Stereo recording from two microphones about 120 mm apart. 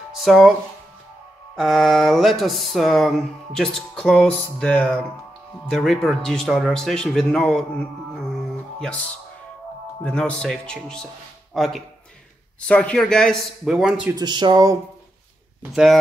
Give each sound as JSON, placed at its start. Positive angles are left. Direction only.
{"t": 0.2, "sound": "speech", "side_deg": 0}
{"t": 1.5, "sound": "speech", "side_deg": 0}
{"t": 8.7, "sound": "speech", "side_deg": 5}
{"t": 10.0, "sound": "speech", "side_deg": 5}
{"t": 14.1, "sound": "speech", "side_deg": -40}
{"t": 15.7, "sound": "speech", "side_deg": 0}